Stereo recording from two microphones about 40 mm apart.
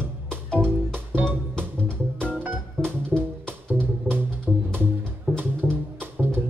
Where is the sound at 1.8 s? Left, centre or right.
Right.